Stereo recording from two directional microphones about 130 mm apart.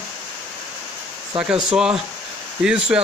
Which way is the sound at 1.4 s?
5° right (ahead or behind).